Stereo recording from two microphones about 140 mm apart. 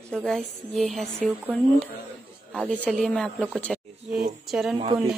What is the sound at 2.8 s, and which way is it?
A woman's voice, 5° left (ahead or behind).